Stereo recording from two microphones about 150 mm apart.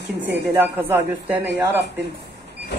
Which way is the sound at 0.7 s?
15° right (ahead or behind).